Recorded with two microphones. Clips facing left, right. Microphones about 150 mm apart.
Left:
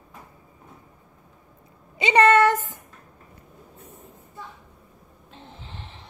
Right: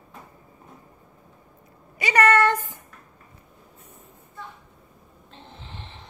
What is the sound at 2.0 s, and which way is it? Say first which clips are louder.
Speech: left 3 dB; 25° left (ahead or behind).